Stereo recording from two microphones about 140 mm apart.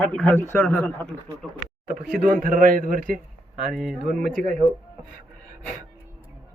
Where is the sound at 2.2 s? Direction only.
75° right (ahead or behind).